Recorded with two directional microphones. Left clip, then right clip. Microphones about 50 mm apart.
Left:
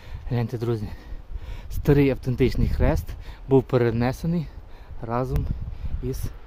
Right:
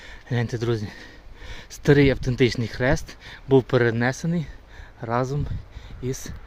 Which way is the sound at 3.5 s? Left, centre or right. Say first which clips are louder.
Right 1 dB; left.